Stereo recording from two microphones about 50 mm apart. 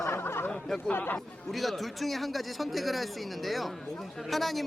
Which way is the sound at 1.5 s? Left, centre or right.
Centre.